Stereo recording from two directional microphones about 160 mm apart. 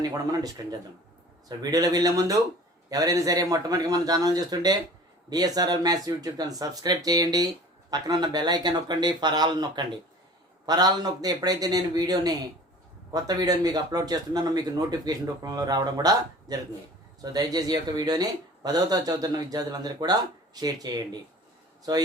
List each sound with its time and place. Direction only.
0.0 s speech: 25° right (ahead or behind)